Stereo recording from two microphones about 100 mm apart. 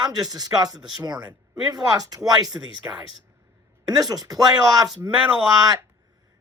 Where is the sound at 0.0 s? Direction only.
40° right (ahead or behind).